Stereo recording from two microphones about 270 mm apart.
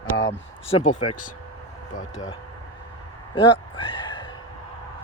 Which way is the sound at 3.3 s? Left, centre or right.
Centre.